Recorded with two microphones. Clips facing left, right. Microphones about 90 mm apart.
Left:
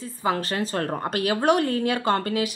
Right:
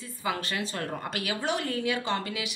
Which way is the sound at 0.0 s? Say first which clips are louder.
Left 6 dB; 35° left (ahead or behind).